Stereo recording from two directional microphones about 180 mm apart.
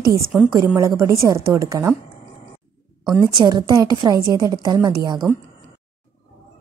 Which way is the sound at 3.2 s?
25° right (ahead or behind).